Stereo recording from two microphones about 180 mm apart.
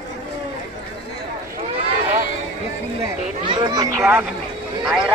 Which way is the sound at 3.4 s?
25° right (ahead or behind).